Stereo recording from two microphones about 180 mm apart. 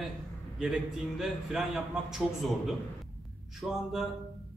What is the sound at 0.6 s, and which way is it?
A man's voice, centre (ahead or behind).